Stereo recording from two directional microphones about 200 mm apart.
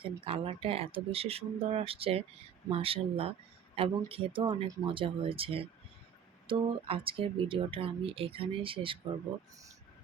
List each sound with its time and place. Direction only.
0.0 s speech: 25° right (ahead or behind)